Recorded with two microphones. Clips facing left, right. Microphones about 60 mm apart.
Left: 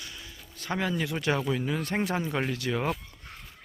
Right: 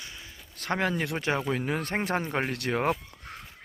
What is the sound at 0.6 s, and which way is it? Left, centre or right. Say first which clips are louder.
Speech: right 2 dB; right.